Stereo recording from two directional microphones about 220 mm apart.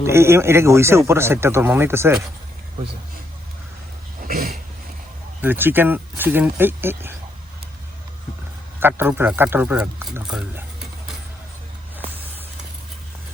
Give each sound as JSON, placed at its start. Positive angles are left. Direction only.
{"t": 0.0, "sound": "speech", "side_deg": -10}
{"t": 4.2, "sound": "dog", "side_deg": -40}
{"t": 5.4, "sound": "speech", "side_deg": -10}
{"t": 8.8, "sound": "speech", "side_deg": -10}